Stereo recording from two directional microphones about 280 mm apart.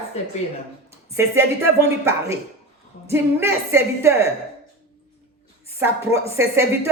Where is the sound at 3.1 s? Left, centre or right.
Centre.